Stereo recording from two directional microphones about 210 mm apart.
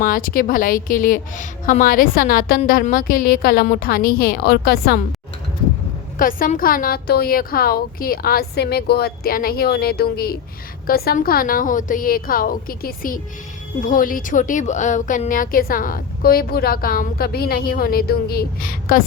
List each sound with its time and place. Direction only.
0.0 s a woman's voice: 40° left (ahead or behind)
6.1 s a woman's voice: 40° left (ahead or behind)